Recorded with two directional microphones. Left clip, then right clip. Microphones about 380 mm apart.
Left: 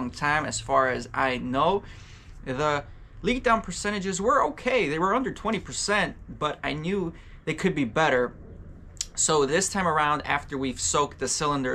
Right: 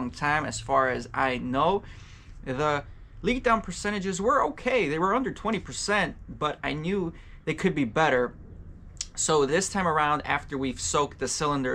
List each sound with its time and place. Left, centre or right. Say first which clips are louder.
0.0 s speech: left 1 dB; centre